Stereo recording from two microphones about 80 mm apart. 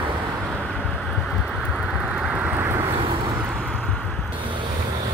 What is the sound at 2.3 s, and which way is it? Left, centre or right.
Vehicle, centre.